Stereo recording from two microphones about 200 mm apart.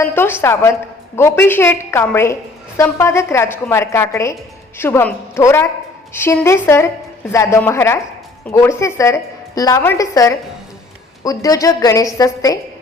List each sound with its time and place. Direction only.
0.0 s a woman's voice: 10° left (ahead or behind)